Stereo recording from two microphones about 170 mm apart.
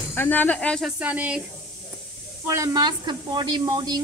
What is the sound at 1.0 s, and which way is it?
Speech, 10° right (ahead or behind).